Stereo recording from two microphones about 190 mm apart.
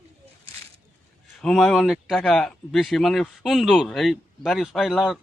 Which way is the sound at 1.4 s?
Centre (ahead or behind).